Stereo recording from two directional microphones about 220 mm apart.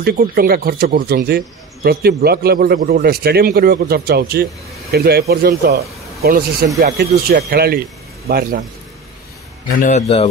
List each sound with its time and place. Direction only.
0.0 s a man's voice: 45° right (ahead or behind)
9.8 s a man's voice: 35° left (ahead or behind)